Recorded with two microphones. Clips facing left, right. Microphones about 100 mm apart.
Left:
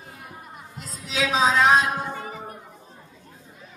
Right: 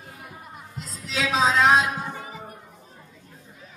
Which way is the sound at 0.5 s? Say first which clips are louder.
Even; centre (ahead or behind).